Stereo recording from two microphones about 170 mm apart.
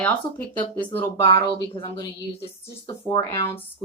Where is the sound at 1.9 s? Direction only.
20° left (ahead or behind).